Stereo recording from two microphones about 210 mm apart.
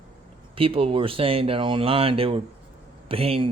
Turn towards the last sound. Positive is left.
turn(degrees=-25)  # may be behind; listen again after turning